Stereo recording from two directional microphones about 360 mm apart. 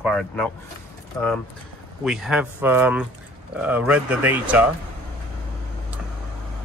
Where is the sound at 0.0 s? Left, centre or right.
Centre.